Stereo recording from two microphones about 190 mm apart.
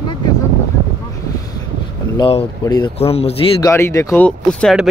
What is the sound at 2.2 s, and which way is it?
A man's voice, 25° left (ahead or behind).